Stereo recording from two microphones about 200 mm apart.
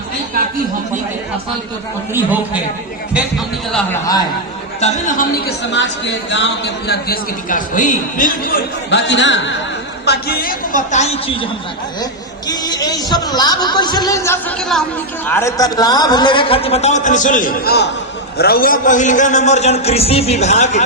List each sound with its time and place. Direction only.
4.8 s a man's voice: 40° left (ahead or behind)
5.5 s speech: 60° left (ahead or behind)
10.1 s a man's voice: 50° left (ahead or behind); by 11.4 s 30° left (ahead or behind)
12.5 s a man's voice: 20° left (ahead or behind)
14.6 s a woman's voice: centre (ahead or behind)
15.3 s a man's voice: 15° left (ahead or behind); by 20.8 s 35° left (ahead or behind)